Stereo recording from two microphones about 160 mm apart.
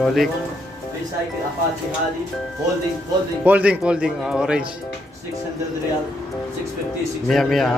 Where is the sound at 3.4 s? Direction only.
10° right (ahead or behind).